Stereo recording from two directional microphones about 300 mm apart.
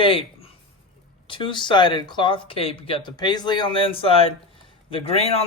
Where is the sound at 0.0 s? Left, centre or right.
Centre.